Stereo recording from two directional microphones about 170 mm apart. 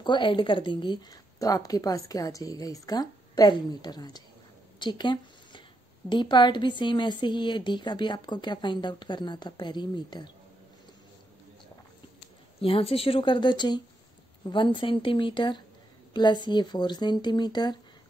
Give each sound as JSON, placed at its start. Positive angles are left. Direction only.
{"t": 0.0, "sound": "a woman's voice", "side_deg": 30}
{"t": 4.7, "sound": "a sound", "side_deg": 25}
{"t": 6.0, "sound": "a woman's voice", "side_deg": 25}
{"t": 12.5, "sound": "a woman's voice", "side_deg": 35}